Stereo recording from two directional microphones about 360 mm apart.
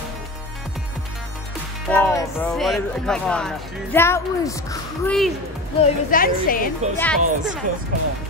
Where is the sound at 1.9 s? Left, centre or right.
Centre.